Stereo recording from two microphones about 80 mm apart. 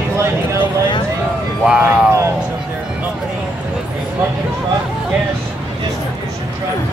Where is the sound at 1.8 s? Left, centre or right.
Centre.